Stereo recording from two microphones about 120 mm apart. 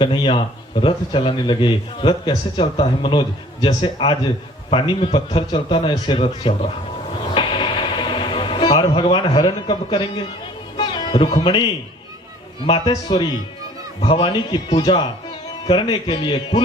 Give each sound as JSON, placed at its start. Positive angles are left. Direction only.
{"t": 0.0, "sound": "a man's voice", "side_deg": 45}
{"t": 7.3, "sound": "a sound", "side_deg": 45}
{"t": 10.8, "sound": "music", "side_deg": 40}
{"t": 11.3, "sound": "a man's voice", "side_deg": 40}
{"t": 12.8, "sound": "a man's voice", "side_deg": 35}